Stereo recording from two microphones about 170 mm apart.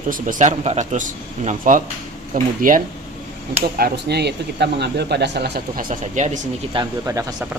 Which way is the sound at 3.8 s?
75° right (ahead or behind).